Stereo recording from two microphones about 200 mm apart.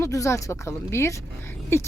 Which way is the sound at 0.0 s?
15° left (ahead or behind).